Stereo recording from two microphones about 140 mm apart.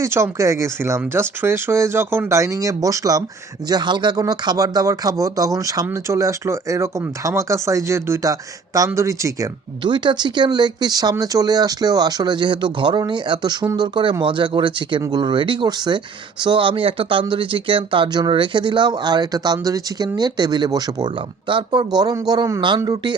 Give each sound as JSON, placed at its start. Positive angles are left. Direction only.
{"t": 0.0, "sound": "speech", "side_deg": -20}
{"t": 9.8, "sound": "speech", "side_deg": -35}